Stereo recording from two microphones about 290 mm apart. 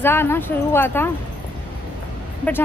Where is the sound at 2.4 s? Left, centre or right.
Centre.